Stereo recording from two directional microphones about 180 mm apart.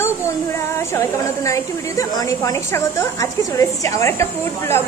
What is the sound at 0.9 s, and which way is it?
A woman's voice, 15° left (ahead or behind).